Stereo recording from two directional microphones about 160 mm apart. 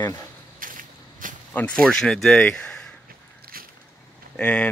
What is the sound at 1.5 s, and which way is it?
Speech, 5° left (ahead or behind).